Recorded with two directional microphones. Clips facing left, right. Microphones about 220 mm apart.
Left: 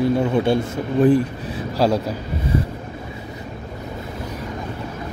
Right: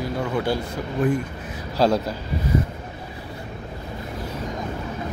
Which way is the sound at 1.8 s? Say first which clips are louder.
Left 1 dB; 10° left (ahead or behind).